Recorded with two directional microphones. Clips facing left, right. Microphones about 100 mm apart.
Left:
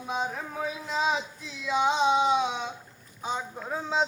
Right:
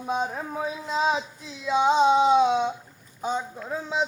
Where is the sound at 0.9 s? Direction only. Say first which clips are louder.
Right 3 dB; 35° right (ahead or behind).